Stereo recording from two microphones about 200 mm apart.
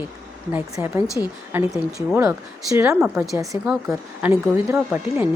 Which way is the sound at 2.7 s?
10° right (ahead or behind).